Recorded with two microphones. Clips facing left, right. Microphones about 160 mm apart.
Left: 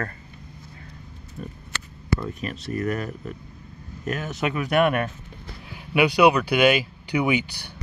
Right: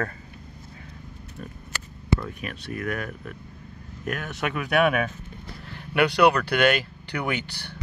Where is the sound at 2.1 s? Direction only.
25° right (ahead or behind).